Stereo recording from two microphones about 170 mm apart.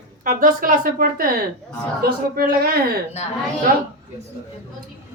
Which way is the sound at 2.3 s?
65° right (ahead or behind).